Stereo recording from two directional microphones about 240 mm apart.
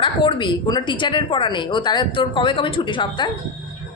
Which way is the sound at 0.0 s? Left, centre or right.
Left.